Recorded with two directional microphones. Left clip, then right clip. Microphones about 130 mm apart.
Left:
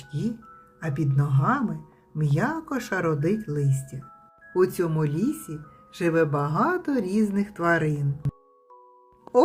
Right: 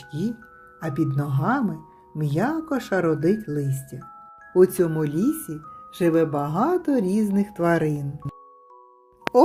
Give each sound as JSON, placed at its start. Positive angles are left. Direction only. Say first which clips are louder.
{"t": 0.1, "sound": "speech", "louder": "right 2 dB", "side_deg": -25}
{"t": 5.2, "sound": "speech", "louder": "right 4 dB", "side_deg": 25}
{"t": 5.5, "sound": "speech", "louder": "right 5 dB", "side_deg": -15}